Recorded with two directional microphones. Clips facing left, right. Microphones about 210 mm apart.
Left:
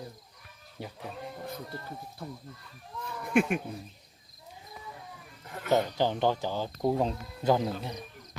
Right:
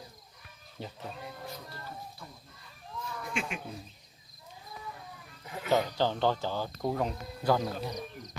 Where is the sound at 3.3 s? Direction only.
60° left (ahead or behind).